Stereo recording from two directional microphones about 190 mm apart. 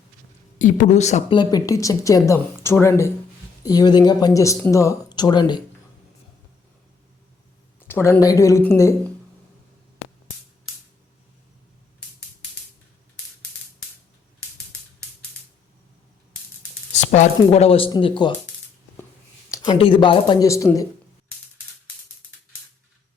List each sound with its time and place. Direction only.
0.6 s speech: 40° left (ahead or behind)
1.4 s speech: 20° left (ahead or behind)
7.8 s speech: 10° left (ahead or behind)
16.9 s speech: 40° left (ahead or behind)
19.6 s speech: 30° left (ahead or behind)